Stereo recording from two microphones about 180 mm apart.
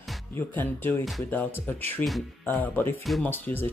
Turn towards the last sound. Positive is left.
turn(degrees=10)  # may be behind; listen again after turning